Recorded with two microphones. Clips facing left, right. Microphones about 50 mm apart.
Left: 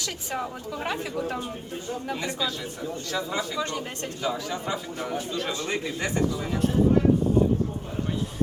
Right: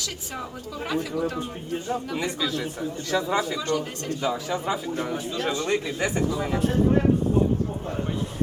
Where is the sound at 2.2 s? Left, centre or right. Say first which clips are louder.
Right 3 dB; centre.